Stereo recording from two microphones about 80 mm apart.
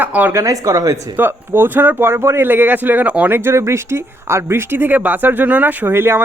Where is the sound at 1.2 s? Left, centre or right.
Right.